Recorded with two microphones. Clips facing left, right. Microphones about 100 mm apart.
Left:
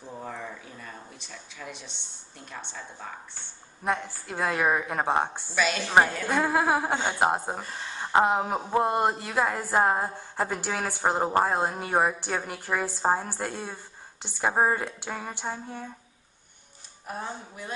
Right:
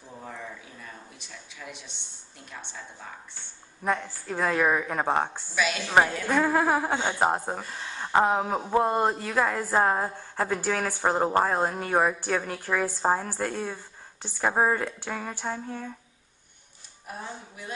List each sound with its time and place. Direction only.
0.1 s speech: 20° left (ahead or behind)
1.7 s a woman's voice: 10° right (ahead or behind)
3.8 s a woman's voice: 10° left (ahead or behind)
5.5 s a woman's voice: 10° right (ahead or behind)
6.2 s a woman's voice: 10° left (ahead or behind)
17.1 s speech: 40° left (ahead or behind)